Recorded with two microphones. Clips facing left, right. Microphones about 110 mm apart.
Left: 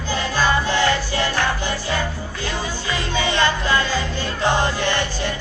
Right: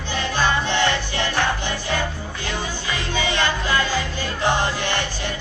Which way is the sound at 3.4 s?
15° right (ahead or behind).